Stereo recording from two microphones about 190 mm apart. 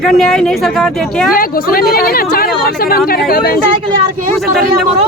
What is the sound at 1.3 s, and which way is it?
A woman's voice, 50° left (ahead or behind).